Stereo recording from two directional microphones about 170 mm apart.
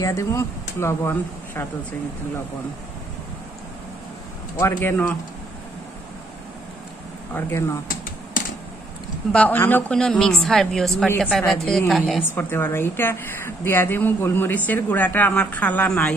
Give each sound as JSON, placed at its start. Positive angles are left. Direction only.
{"t": 0.0, "sound": "a woman's voice", "side_deg": 20}
{"t": 4.6, "sound": "a woman's voice", "side_deg": 15}
{"t": 7.3, "sound": "a woman's voice", "side_deg": 10}
{"t": 7.9, "sound": "typing", "side_deg": 55}
{"t": 9.3, "sound": "a woman's voice", "side_deg": 10}
{"t": 12.3, "sound": "a woman's voice", "side_deg": 15}